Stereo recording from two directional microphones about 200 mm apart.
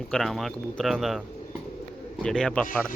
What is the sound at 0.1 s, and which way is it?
Speech, centre (ahead or behind).